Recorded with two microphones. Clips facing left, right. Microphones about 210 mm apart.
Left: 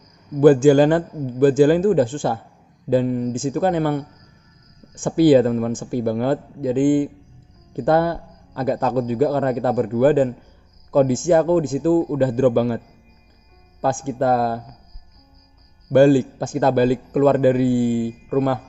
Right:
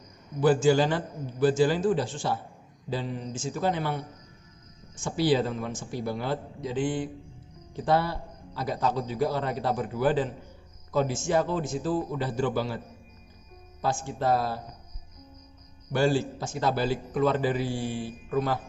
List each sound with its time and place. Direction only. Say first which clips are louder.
0.4 s a man's voice: left 10 dB; 50° left (ahead or behind)
15.9 s a man's voice: left 12 dB; 50° left (ahead or behind)